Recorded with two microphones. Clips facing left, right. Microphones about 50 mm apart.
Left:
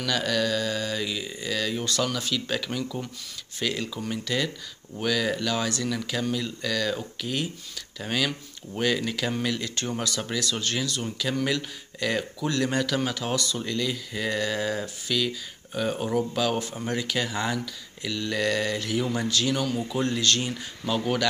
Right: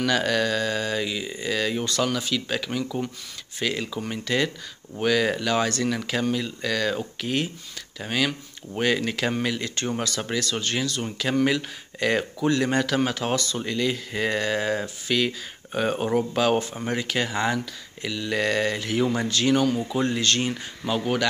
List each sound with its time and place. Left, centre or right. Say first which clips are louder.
0.0 s speech: right 3 dB; right
1.0 s speech: right 3 dB; centre
4.2 s speech: right 5 dB; right
8.0 s speech: right 2 dB; centre; by 13.6 s right
13.6 s speech: right 3 dB; right
18.0 s speech: right 2 dB; centre
18.4 s speech: right 2 dB; right
20.8 s speech: right 1 dB; centre